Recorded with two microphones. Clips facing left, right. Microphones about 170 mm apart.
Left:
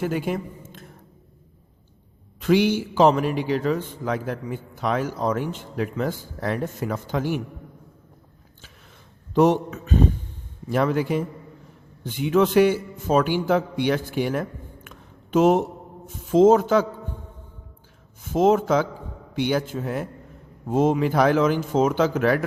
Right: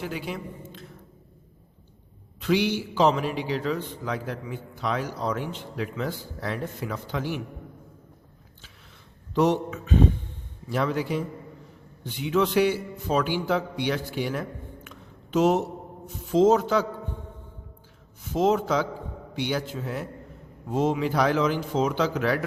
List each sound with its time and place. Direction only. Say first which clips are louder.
0.0 s a woman's voice: left 7 dB; 50° left (ahead or behind)
2.4 s a man's voice: left 5 dB; 50° left (ahead or behind)
9.3 s a man's voice: left 4 dB; 50° left (ahead or behind)
14.8 s a sound: left 1 dB; 50° left (ahead or behind)
16.3 s a man's voice: left 4 dB; 50° left (ahead or behind)
18.3 s a man's voice: left 4 dB; 50° left (ahead or behind)